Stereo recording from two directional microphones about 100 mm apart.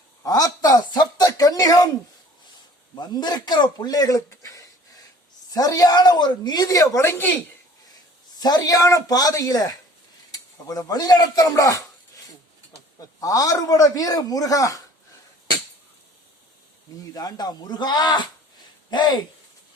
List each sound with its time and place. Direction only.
0.2 s speech: 40° left (ahead or behind)
2.9 s a man's voice: 45° left (ahead or behind); by 7.3 s 25° left (ahead or behind)
7.9 s a man's voice: 40° left (ahead or behind)
10.7 s a man's voice: 35° left (ahead or behind)
17.2 s a man's voice: 40° left (ahead or behind)